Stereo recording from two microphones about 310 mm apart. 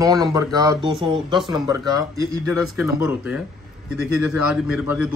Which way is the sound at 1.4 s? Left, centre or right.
Centre.